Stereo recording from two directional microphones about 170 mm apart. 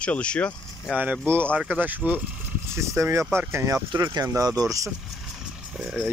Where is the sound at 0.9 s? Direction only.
10° right (ahead or behind).